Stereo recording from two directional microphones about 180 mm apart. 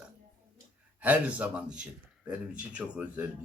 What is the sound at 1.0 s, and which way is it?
Speech, 10° right (ahead or behind).